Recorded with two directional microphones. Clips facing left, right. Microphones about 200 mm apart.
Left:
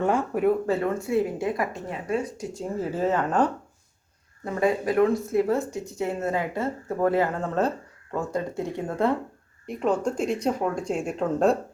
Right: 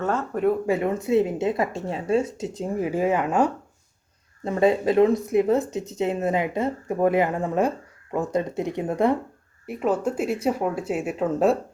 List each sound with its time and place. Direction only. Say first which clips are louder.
0.0 s speech: left 2 dB; 15° left (ahead or behind)
0.7 s speech: right 3 dB; 15° right (ahead or behind)
4.4 s speech: right 4 dB; 25° right (ahead or behind)
9.6 s speech: right 1 dB; 5° right (ahead or behind)